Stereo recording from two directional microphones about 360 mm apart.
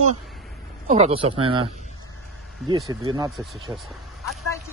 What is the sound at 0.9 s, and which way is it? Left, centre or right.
Speech, centre.